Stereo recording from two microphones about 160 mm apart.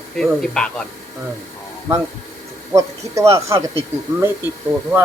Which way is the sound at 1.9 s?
15° right (ahead or behind).